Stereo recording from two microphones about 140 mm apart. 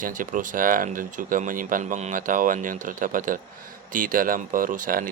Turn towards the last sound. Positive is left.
turn(degrees=-75)  # may be behind; listen again after turning